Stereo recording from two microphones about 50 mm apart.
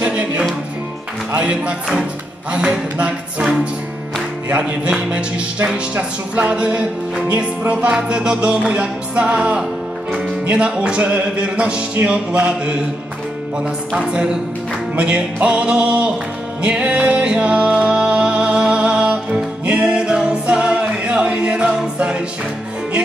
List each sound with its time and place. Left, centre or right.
0.0 s music: right
1.3 s speech: right
4.5 s speech: right
5.9 s speech: right
13.9 s a woman's voice: centre
16.6 s music: right